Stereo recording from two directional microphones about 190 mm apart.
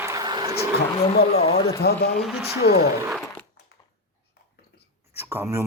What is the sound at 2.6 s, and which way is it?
Speech, 60° left (ahead or behind).